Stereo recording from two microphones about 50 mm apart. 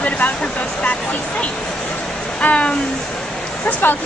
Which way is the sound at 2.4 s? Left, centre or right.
Left.